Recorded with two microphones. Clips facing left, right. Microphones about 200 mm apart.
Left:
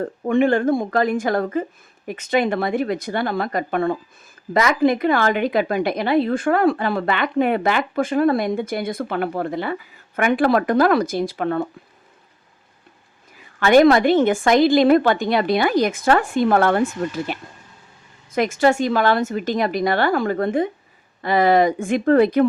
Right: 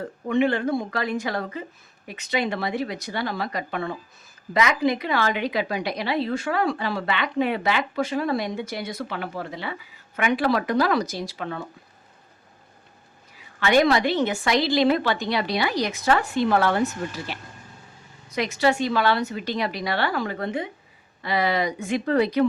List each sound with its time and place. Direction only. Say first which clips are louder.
0.0 s a woman's voice: left 4 dB; 50° left (ahead or behind)
13.6 s a woman's voice: left 6 dB; 50° left (ahead or behind)